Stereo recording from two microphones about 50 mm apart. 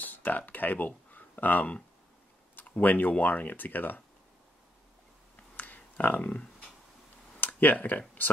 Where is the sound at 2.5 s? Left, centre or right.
Left.